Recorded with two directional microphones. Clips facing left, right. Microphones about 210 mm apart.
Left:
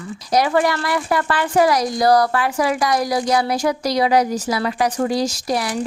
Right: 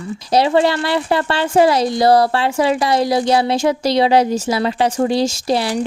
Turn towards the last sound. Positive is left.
turn(degrees=-30)  # may be behind; listen again after turning